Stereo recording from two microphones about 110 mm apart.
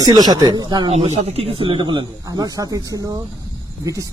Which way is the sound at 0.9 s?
65° right (ahead or behind).